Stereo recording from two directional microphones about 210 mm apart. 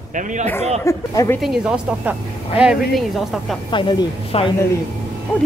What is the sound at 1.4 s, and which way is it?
A woman's voice, 5° right (ahead or behind).